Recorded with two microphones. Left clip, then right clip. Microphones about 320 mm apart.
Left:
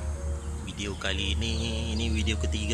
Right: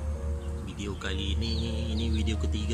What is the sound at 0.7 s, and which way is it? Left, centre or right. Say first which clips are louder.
Speech: left 4 dB; centre.